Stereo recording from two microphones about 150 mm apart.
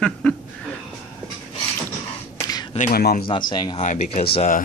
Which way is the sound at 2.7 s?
75° left (ahead or behind).